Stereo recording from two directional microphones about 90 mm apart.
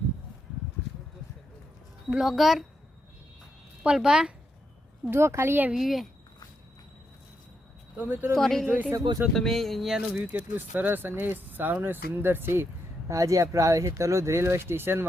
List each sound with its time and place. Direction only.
2.1 s speech: 5° right (ahead or behind)
3.8 s speech: 10° right (ahead or behind)
5.1 s speech: 30° right (ahead or behind)
5.7 s speech: centre (ahead or behind)
7.9 s speech: 20° right (ahead or behind)
8.4 s speech: 5° left (ahead or behind)
8.6 s speech: 15° right (ahead or behind)
9.3 s speech: 5° left (ahead or behind)
10.2 s speech: 20° right (ahead or behind)
13.1 s speech: 35° right (ahead or behind)